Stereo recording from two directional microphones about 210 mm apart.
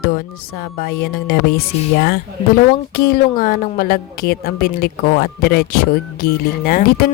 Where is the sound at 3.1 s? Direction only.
45° left (ahead or behind).